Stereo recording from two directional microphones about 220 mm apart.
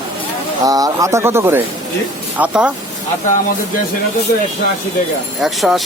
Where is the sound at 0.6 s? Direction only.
15° right (ahead or behind).